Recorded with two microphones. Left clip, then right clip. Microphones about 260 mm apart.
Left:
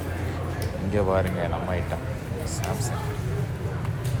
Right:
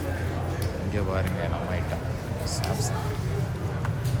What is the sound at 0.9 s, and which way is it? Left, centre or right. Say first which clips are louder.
Speech: left 7 dB; centre.